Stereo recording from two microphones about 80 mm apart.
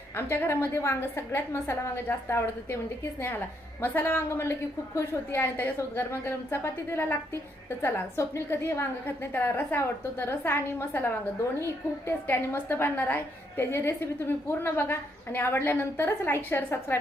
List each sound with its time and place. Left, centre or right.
0.2 s a woman's voice: left